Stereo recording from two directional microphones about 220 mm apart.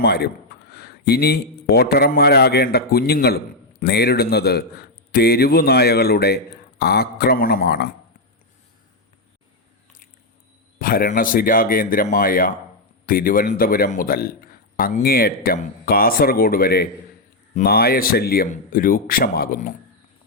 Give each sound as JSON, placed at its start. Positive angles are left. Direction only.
{"t": 0.0, "sound": "a man's voice", "side_deg": 45}
{"t": 10.8, "sound": "speech", "side_deg": 40}